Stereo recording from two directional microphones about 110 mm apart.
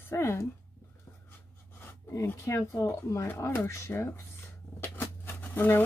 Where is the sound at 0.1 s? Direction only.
25° left (ahead or behind).